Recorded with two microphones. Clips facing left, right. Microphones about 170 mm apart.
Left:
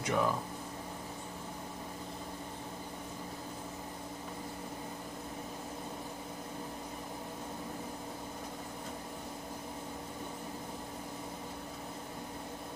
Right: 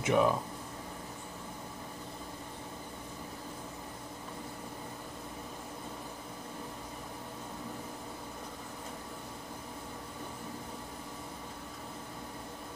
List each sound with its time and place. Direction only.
0.0 s speech: 20° right (ahead or behind)